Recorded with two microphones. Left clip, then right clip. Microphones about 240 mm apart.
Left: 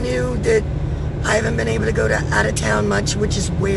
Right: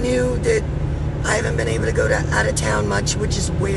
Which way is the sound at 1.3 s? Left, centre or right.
Centre.